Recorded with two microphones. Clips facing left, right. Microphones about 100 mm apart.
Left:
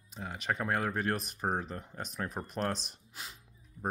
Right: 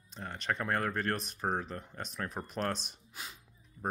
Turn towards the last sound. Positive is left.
turn(degrees=0)  # may be behind; listen again after turning